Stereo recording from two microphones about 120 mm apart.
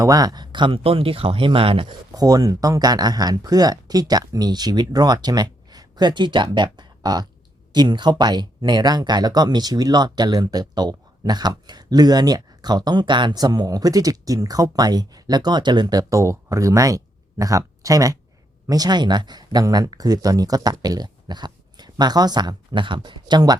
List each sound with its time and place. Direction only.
0.0 s speech: 30° right (ahead or behind); by 2.0 s 45° right (ahead or behind)
2.1 s speech: 30° right (ahead or behind)